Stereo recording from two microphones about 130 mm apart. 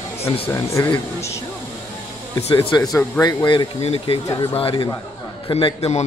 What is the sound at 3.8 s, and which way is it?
A man's voice, 50° left (ahead or behind).